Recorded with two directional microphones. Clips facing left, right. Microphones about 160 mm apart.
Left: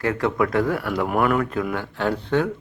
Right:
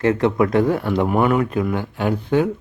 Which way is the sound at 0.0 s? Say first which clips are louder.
Right 5 dB; 20° right (ahead or behind).